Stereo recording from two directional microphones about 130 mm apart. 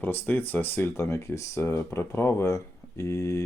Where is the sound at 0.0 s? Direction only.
15° left (ahead or behind).